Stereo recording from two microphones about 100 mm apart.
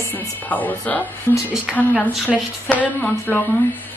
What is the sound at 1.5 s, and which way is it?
Speech, 10° right (ahead or behind).